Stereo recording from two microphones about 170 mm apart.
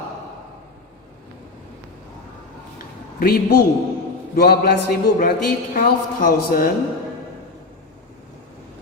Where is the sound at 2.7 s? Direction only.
60° left (ahead or behind).